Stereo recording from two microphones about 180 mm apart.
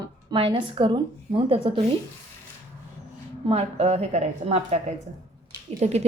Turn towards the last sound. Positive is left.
turn(degrees=-40)  # may be behind; listen again after turning